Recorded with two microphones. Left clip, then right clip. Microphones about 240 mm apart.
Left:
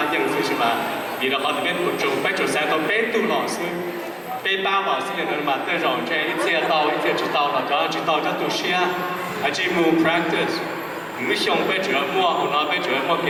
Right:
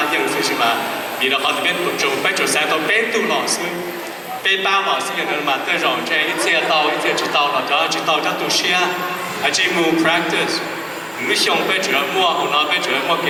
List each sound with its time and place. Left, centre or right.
0.0 s a sound: centre
1.2 s speech: centre
4.4 s speech: centre